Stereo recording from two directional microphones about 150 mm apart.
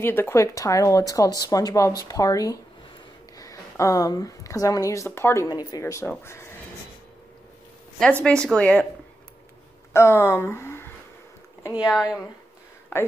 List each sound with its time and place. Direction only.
0.0 s a woman's voice: 15° left (ahead or behind)
8.0 s speech: 5° left (ahead or behind)
9.9 s speech: 15° left (ahead or behind)
11.7 s speech: 5° right (ahead or behind)
12.9 s speech: 15° left (ahead or behind)